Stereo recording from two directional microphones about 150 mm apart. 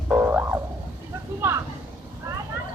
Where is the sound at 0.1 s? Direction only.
10° right (ahead or behind).